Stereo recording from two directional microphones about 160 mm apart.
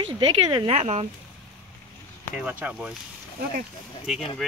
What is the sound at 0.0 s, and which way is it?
Speech, 30° right (ahead or behind).